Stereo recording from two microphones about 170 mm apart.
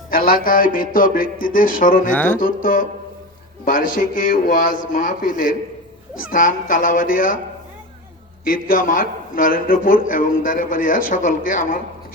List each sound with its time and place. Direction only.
0.1 s a man's voice: 55° left (ahead or behind)
2.1 s music: 10° left (ahead or behind)
2.4 s a man's voice: 55° left (ahead or behind)
8.4 s a man's voice: 55° left (ahead or behind)